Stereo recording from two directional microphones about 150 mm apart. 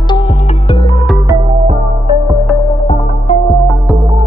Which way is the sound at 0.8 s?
20° left (ahead or behind).